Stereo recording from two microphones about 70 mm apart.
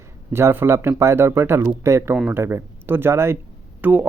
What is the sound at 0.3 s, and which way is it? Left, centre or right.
Speech, right.